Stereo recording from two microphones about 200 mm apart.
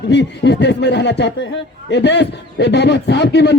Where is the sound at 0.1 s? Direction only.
60° left (ahead or behind).